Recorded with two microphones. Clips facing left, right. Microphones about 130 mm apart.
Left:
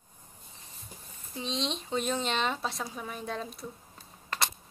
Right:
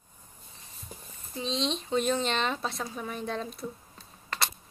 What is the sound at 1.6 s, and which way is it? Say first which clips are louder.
Speech: right 5 dB; 10° left (ahead or behind).